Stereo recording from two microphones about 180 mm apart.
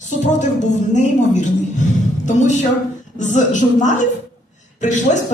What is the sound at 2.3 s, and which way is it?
A woman's voice, 40° left (ahead or behind).